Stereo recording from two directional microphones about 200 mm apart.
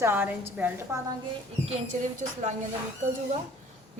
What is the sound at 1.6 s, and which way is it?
Speech, 35° right (ahead or behind).